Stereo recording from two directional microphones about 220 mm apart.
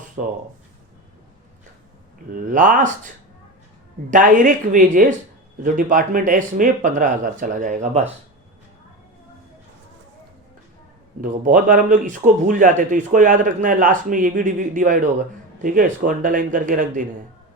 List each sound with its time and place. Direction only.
2.3 s a man's voice: 35° right (ahead or behind)
4.1 s a man's voice: 35° right (ahead or behind)
11.2 s a man's voice: 40° right (ahead or behind)